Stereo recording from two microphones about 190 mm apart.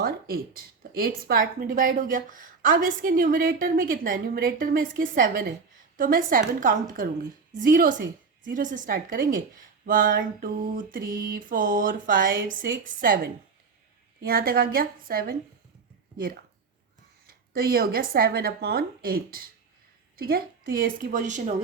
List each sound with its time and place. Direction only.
0.0 s speech: 50° right (ahead or behind)